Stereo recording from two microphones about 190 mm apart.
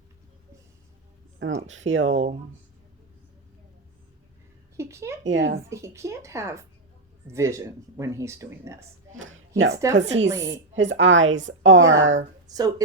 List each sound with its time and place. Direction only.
1.4 s speech: 85° right
4.8 s speech: 15° right (ahead or behind)
5.2 s a woman's voice: 70° right (ahead or behind)
5.6 s speech: 15° right (ahead or behind)
9.1 s a woman's voice: 90° right
9.9 s speech: 40° right (ahead or behind)
10.2 s speech: 20° right (ahead or behind)
10.5 s a woman's voice: 70° right (ahead or behind)
12.5 s speech: 20° right (ahead or behind)